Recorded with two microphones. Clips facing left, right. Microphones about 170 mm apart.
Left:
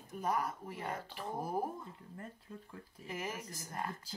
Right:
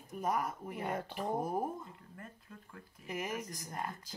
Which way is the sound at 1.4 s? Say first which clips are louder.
Left 2 dB; 20° right (ahead or behind).